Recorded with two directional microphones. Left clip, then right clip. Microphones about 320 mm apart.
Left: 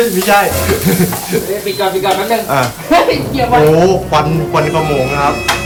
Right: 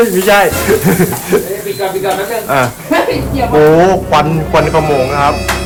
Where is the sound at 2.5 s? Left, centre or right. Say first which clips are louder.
Right 4 dB; centre.